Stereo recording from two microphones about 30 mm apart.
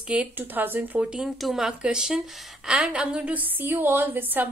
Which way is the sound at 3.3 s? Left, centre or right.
Right.